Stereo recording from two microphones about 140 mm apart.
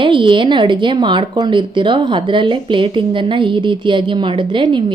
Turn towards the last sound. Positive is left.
turn(degrees=-35)  # may be behind; listen again after turning